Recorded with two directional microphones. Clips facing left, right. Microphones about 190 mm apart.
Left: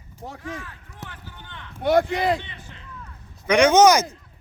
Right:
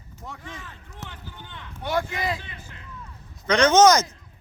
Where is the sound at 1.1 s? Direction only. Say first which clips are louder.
Right 1 dB; 15° right (ahead or behind).